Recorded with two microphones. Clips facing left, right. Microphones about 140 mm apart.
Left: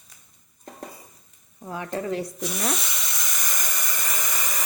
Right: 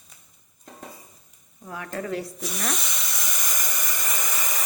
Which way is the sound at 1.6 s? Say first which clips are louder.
Left 3 dB; 25° left (ahead or behind).